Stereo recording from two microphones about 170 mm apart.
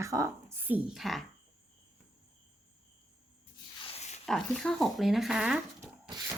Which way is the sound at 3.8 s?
35° left (ahead or behind).